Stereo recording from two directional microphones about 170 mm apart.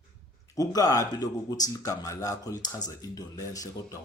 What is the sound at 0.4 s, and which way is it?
A man's voice, 20° left (ahead or behind).